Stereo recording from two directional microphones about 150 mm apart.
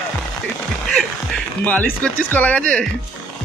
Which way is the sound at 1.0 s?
5° left (ahead or behind).